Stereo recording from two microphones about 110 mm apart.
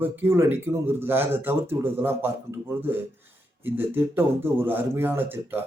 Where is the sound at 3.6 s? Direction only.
20° right (ahead or behind).